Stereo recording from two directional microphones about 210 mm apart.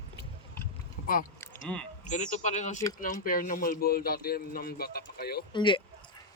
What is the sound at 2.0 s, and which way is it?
Speech, 35° left (ahead or behind).